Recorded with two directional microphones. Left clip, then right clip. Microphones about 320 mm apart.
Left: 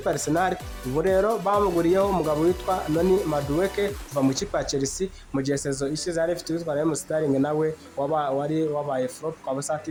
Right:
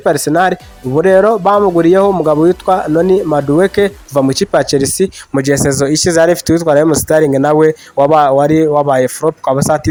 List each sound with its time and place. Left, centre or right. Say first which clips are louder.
0.0 s speech: right 13 dB; right